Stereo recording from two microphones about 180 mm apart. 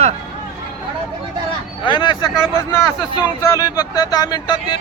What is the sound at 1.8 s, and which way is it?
Speech, 25° left (ahead or behind).